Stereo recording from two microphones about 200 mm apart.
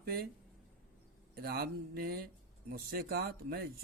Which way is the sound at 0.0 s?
50° right (ahead or behind).